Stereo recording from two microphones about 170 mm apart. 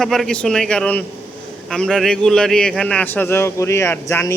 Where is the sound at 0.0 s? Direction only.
Centre (ahead or behind).